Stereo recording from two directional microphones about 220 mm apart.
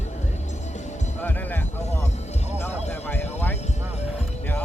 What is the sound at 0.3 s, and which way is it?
Music, 30° left (ahead or behind).